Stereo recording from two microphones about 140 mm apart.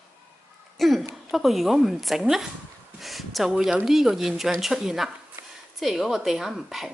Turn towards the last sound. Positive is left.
turn(degrees=0)  # may be behind; listen again after turning